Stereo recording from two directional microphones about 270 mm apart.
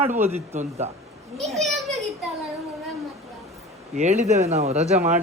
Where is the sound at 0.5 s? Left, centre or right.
Right.